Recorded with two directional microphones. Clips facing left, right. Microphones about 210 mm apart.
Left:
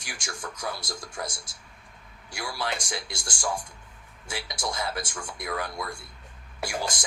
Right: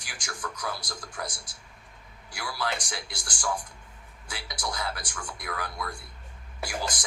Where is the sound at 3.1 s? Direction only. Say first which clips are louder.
Even; 25° left (ahead or behind).